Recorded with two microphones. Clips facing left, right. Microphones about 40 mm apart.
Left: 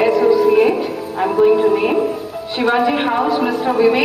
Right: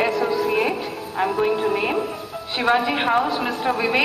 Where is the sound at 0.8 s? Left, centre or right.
Centre.